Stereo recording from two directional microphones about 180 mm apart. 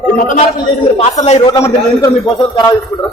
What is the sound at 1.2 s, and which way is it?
Speech, 35° left (ahead or behind).